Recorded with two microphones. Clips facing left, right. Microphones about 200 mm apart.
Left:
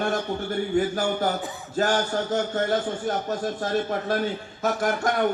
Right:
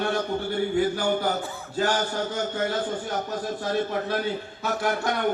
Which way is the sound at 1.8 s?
45° left (ahead or behind).